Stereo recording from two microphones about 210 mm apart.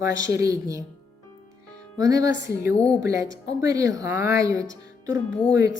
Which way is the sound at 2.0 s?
15° right (ahead or behind).